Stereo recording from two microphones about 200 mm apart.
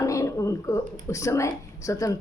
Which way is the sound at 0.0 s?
15° left (ahead or behind).